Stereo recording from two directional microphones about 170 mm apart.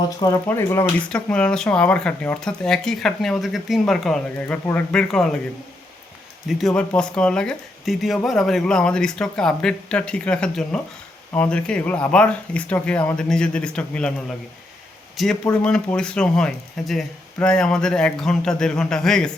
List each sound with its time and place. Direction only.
0.0 s speech: 25° left (ahead or behind); by 5.4 s 5° left (ahead or behind)
6.5 s speech: centre (ahead or behind)